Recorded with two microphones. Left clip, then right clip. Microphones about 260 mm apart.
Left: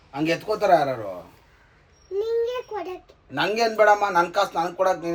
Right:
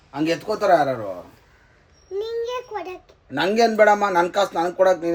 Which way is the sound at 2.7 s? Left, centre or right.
Centre.